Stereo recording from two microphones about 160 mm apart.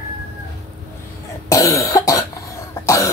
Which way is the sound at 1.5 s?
20° left (ahead or behind).